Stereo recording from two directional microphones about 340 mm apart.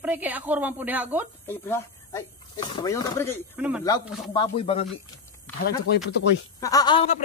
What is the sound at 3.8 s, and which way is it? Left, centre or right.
Speech, centre.